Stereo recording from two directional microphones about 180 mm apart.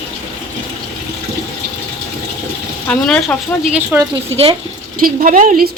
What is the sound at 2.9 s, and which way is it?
Speech, 5° left (ahead or behind).